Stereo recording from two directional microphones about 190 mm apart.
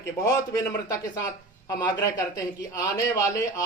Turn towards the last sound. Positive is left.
turn(degrees=15)  # may be behind; listen again after turning